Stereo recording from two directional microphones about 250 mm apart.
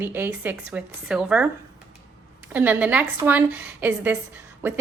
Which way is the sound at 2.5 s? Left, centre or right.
Centre.